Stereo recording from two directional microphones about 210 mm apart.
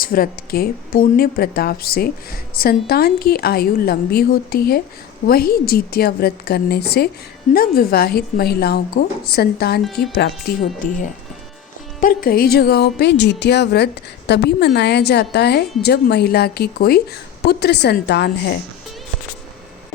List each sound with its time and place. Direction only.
0.0 s speech: 45° left (ahead or behind)
9.8 s speech: centre (ahead or behind)
11.9 s speech: 40° left (ahead or behind)